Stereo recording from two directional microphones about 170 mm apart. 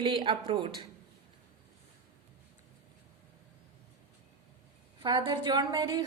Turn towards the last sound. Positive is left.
turn(degrees=-25)  # may be behind; listen again after turning